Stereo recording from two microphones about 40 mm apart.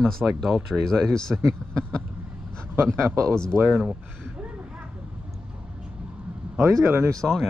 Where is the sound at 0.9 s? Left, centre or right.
Centre.